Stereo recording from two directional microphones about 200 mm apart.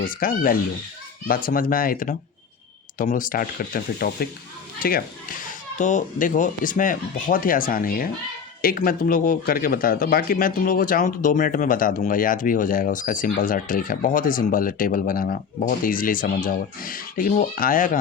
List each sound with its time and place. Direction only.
0.0 s a man's voice: 45° left (ahead or behind)